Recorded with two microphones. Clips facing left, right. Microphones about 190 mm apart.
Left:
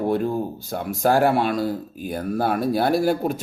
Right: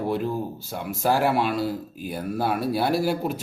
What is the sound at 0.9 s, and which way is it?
Speech, centre (ahead or behind).